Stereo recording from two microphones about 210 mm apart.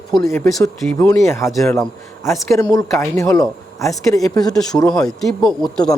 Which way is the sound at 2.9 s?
10° left (ahead or behind).